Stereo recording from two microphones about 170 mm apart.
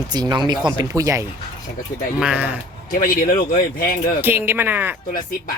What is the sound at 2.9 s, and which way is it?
Speech, 55° left (ahead or behind).